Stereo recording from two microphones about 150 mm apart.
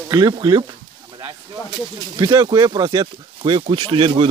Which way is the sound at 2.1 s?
25° right (ahead or behind).